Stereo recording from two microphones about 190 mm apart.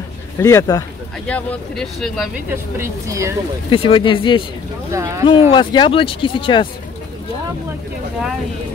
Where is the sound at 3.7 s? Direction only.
30° left (ahead or behind).